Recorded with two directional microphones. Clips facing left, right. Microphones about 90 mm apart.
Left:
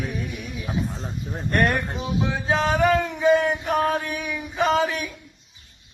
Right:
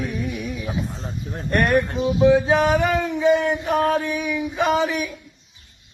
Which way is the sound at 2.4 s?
15° right (ahead or behind).